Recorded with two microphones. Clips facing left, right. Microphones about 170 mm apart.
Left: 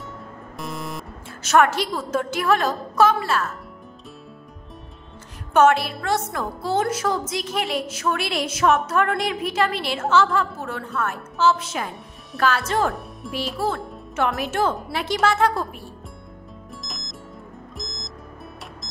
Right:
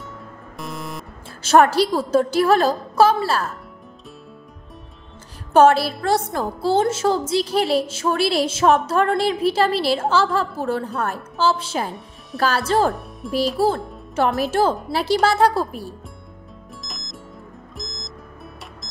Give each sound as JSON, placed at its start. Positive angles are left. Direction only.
{"t": 0.6, "sound": "music", "side_deg": 0}
{"t": 1.4, "sound": "a woman's voice", "side_deg": -30}
{"t": 5.5, "sound": "a woman's voice", "side_deg": -30}
{"t": 13.2, "sound": "speech", "side_deg": 0}
{"t": 13.7, "sound": "a woman's voice", "side_deg": -35}
{"t": 16.8, "sound": "music", "side_deg": 0}